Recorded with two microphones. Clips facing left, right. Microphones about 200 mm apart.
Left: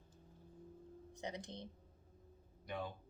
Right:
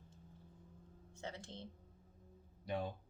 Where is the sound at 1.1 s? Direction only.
15° left (ahead or behind).